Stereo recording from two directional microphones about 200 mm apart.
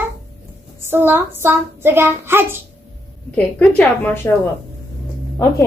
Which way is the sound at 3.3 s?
5° left (ahead or behind).